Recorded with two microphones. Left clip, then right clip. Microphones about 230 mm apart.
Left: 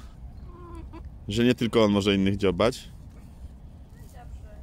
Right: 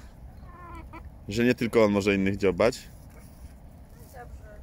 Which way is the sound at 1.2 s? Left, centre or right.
Centre.